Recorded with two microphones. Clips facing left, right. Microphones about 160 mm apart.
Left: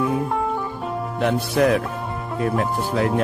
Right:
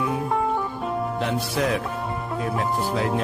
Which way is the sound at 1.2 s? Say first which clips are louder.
Left 9 dB; 55° left (ahead or behind).